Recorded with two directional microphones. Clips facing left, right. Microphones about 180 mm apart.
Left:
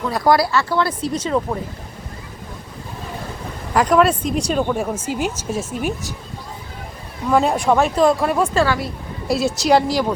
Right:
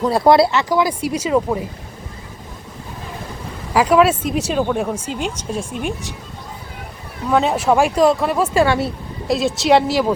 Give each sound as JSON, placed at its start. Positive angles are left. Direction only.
{"t": 0.0, "sound": "speech", "side_deg": -25}
{"t": 3.8, "sound": "speech", "side_deg": -5}
{"t": 7.3, "sound": "speech", "side_deg": 0}
{"t": 8.6, "sound": "speech", "side_deg": -25}
{"t": 9.2, "sound": "speech", "side_deg": 0}